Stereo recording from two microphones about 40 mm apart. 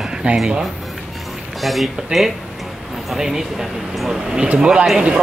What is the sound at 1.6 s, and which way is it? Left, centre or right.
Speech, centre.